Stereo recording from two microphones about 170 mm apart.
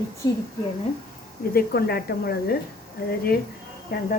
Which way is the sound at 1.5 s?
65° left (ahead or behind).